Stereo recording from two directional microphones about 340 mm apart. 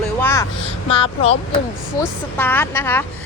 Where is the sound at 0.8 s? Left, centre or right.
Centre.